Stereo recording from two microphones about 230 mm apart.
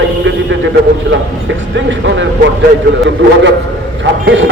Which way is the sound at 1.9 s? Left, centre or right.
Right.